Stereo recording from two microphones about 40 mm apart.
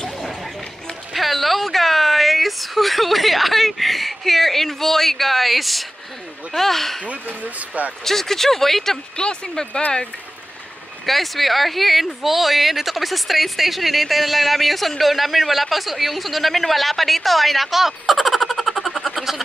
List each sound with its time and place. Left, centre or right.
0.2 s a sound: centre
1.1 s a woman's voice: centre
7.2 s speech: right
8.0 s speech: centre
9.1 s speech: left
11.1 s speech: centre